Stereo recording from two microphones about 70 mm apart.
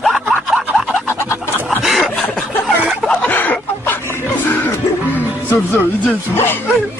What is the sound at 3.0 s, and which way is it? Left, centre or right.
Chicken, left.